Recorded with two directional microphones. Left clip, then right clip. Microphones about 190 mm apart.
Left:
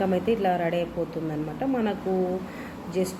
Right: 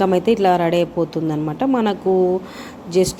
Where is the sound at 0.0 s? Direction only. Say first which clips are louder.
Right 9 dB; 50° right (ahead or behind).